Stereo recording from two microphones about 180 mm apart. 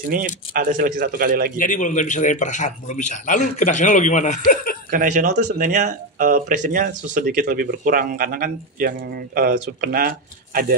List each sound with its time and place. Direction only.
0.1 s speech: 50° right (ahead or behind)
1.6 s a man's voice: 45° left (ahead or behind)
4.9 s speech: 45° right (ahead or behind)